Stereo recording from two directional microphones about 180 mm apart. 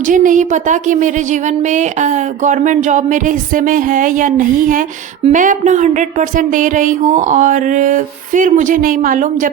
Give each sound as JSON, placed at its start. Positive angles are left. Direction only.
{"t": 0.0, "sound": "speech", "side_deg": -45}